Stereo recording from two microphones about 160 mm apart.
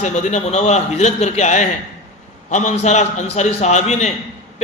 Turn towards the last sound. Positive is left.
turn(degrees=45)  # may be behind; listen again after turning